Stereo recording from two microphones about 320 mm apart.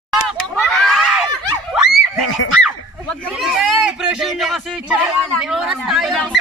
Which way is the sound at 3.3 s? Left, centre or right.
Centre.